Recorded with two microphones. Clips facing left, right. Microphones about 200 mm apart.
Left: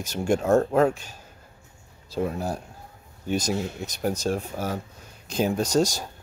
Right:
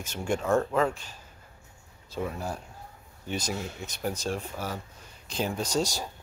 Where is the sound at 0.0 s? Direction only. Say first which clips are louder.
Left 6 dB; 40° left (ahead or behind).